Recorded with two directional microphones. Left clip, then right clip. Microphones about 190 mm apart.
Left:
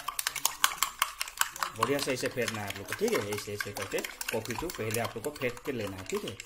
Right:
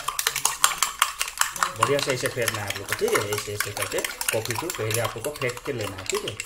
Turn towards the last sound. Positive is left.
turn(degrees=0)  # may be behind; listen again after turning